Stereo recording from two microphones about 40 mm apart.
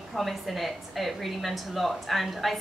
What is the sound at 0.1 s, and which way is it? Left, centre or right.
A woman's voice, centre.